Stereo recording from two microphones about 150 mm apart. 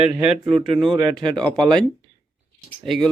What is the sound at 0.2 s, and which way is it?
Speech, 5° right (ahead or behind).